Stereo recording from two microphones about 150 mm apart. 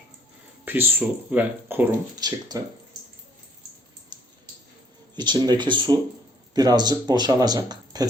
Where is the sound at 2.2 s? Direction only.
25° right (ahead or behind).